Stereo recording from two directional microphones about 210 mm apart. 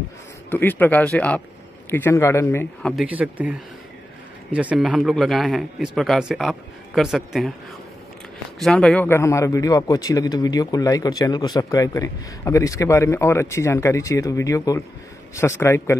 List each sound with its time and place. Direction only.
0.5 s a man's voice: 10° left (ahead or behind)
3.0 s speech: 5° right (ahead or behind)
8.5 s a man's voice: 5° left (ahead or behind)